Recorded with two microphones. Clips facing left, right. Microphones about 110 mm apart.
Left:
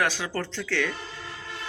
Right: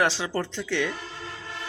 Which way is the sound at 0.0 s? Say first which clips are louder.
Right 2 dB; 25° right (ahead or behind).